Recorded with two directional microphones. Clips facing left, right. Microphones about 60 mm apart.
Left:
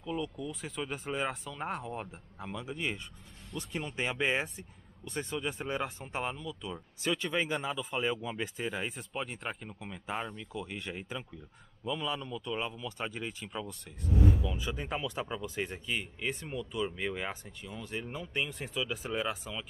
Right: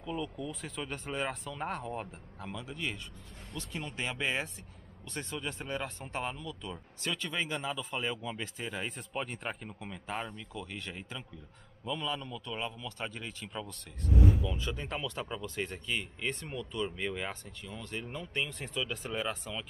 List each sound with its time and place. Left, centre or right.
0.0 s speech: centre
2.0 s speech: centre
3.9 s speech: centre
5.1 s speech: centre
7.2 s speech: left
7.7 s speech: centre
10.6 s speech: centre